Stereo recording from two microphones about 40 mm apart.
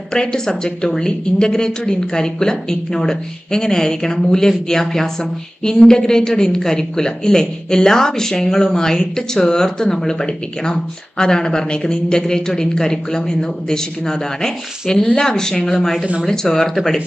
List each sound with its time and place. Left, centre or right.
0.1 s a woman's voice: centre